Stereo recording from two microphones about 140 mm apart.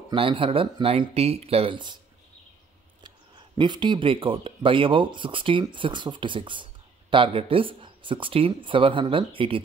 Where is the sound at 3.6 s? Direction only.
35° right (ahead or behind).